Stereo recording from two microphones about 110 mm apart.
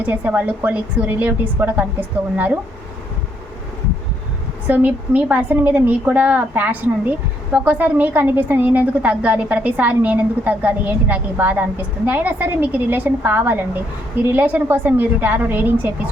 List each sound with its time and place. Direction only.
0.0 s a woman's voice: 15° right (ahead or behind)
4.6 s a woman's voice: 15° right (ahead or behind)